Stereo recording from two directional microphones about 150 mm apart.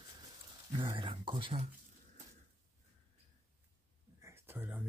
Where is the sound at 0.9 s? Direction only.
35° right (ahead or behind).